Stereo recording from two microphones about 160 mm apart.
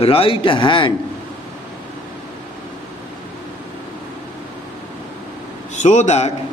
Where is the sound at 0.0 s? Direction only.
35° left (ahead or behind).